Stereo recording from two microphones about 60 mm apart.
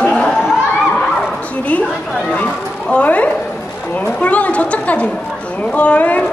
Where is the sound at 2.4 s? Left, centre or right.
Left.